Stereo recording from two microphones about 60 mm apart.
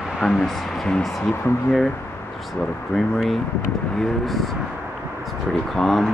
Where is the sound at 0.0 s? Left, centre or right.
Centre.